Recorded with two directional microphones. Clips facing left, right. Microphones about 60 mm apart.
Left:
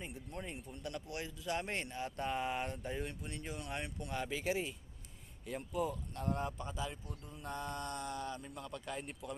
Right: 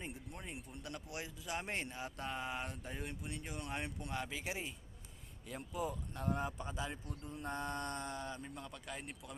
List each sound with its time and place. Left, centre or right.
0.3 s a man's voice: centre
1.5 s speech: centre
6.6 s speech: right
7.3 s speech: right
8.6 s speech: centre